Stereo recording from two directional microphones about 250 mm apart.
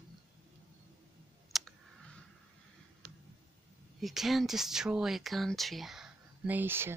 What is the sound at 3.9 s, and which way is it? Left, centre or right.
Speech, centre.